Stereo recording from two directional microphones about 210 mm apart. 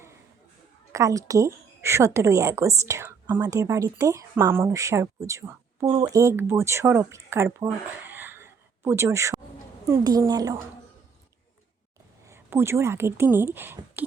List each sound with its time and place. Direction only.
0.9 s a woman's voice: 15° right (ahead or behind)
12.3 s speech: 10° right (ahead or behind)